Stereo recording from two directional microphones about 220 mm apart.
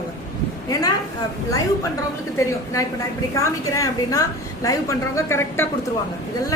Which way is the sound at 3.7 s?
15° left (ahead or behind).